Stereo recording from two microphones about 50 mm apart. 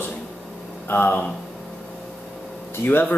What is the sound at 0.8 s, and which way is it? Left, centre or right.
Speech, left.